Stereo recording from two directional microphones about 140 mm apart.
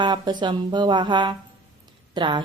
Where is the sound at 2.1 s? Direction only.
35° right (ahead or behind).